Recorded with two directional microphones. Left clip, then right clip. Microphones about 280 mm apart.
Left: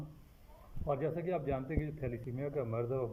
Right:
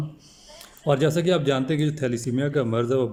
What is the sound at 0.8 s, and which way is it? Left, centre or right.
A man's voice, centre.